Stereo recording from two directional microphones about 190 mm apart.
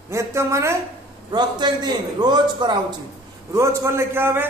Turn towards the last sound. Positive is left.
turn(degrees=-10)  # may be behind; listen again after turning